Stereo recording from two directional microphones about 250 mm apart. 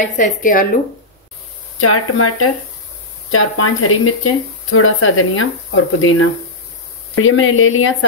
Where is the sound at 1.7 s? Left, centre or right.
Left.